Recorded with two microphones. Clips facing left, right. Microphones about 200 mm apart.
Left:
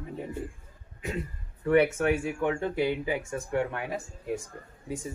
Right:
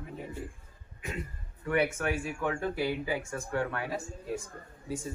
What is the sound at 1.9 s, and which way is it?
Speech, 20° left (ahead or behind).